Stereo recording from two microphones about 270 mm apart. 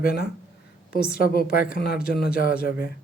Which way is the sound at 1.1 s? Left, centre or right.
Left.